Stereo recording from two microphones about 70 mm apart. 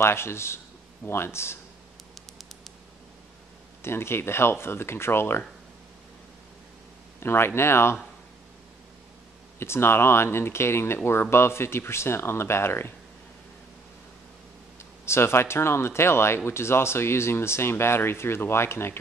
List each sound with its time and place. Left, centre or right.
0.0 s speech: left
3.8 s speech: left
7.2 s speech: left
9.6 s speech: left
14.8 s speech: left